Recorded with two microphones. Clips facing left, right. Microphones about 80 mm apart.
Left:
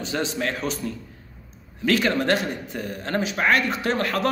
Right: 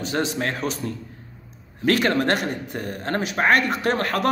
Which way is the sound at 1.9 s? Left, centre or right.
Right.